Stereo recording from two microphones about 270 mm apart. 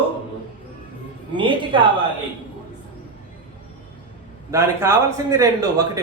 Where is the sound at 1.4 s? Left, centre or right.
Centre.